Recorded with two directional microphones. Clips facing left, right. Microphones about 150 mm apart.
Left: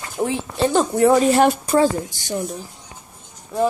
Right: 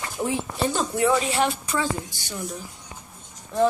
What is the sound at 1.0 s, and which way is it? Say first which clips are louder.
Speech: left 8 dB; 45° left (ahead or behind).